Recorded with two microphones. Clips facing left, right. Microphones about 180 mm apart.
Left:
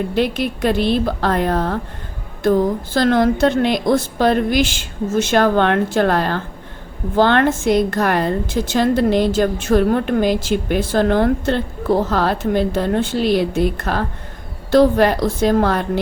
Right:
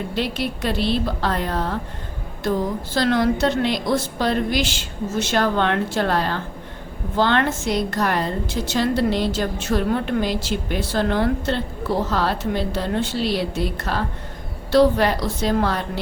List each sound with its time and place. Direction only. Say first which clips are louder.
0.1 s a woman's voice: left 6 dB; 50° left (ahead or behind)
2.9 s a woman's voice: left 3 dB; 50° left (ahead or behind)